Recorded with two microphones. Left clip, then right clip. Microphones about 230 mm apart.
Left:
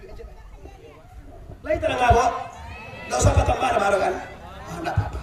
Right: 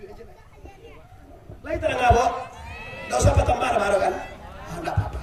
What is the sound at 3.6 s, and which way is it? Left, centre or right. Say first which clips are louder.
Speech: left 1 dB; centre.